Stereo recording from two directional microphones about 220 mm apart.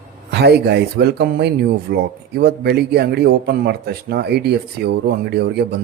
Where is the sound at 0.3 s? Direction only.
50° right (ahead or behind).